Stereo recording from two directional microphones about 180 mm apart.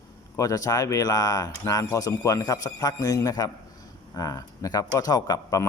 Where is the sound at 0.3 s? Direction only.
20° left (ahead or behind).